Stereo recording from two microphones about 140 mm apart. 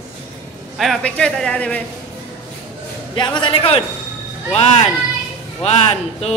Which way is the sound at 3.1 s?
35° left (ahead or behind).